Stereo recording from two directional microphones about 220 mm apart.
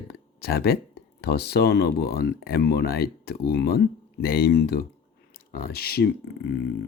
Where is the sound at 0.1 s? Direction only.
45° left (ahead or behind).